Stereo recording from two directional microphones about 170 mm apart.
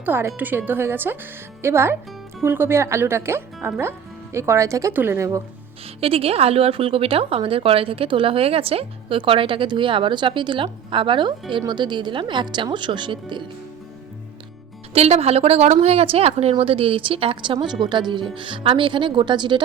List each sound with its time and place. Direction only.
0.0 s speech: 15° right (ahead or behind)
6.0 s a woman's voice: 35° right (ahead or behind)
14.9 s a woman's voice: 40° right (ahead or behind)